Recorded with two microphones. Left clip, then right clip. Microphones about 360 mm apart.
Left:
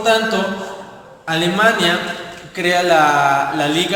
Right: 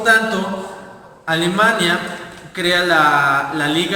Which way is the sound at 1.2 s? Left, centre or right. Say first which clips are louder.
Even; centre.